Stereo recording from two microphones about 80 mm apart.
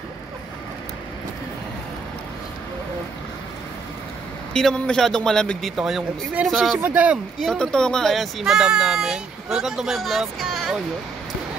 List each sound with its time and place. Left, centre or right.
4.6 s a man's voice: centre
5.8 s speech: centre
6.8 s speech: right
7.4 s speech: centre